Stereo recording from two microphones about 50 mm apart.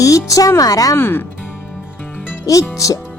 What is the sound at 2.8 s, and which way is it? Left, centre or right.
Speech, left.